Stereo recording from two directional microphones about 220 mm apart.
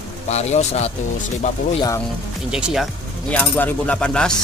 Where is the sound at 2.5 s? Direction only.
Centre (ahead or behind).